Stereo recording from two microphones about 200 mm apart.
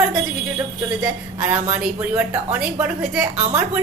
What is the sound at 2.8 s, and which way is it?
Speech, 5° right (ahead or behind).